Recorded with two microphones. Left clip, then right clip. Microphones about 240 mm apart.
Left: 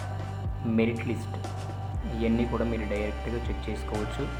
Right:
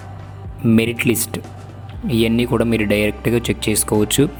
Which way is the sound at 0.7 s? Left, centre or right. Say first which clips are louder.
Right 12 dB; right.